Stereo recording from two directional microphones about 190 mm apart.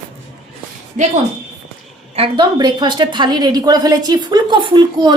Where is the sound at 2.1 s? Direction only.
25° right (ahead or behind).